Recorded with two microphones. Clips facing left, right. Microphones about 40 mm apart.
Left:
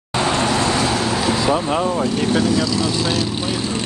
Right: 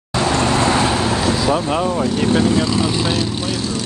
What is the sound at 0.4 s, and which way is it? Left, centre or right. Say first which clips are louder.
Vehicle: right 4 dB; right.